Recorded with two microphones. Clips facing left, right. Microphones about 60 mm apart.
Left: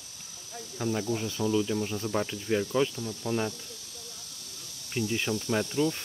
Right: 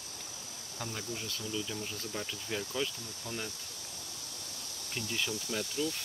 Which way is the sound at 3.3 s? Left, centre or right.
Centre.